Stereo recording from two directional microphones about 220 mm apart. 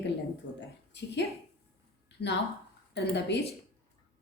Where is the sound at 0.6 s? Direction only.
55° left (ahead or behind).